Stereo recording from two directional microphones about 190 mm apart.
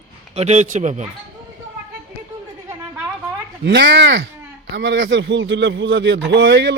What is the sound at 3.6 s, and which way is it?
Speech, 60° right (ahead or behind).